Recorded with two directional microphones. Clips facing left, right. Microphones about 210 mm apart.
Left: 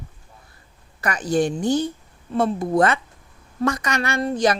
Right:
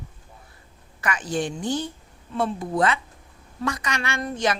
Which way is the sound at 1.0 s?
40° left (ahead or behind).